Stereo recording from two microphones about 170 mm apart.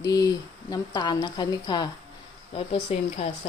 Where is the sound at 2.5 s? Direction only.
35° left (ahead or behind).